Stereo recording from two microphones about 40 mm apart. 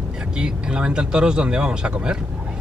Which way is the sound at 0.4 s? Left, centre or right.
Right.